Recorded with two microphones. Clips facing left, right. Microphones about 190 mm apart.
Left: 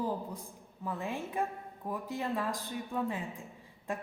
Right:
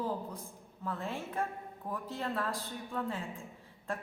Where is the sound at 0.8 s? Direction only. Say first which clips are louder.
Left 1 dB; 10° left (ahead or behind).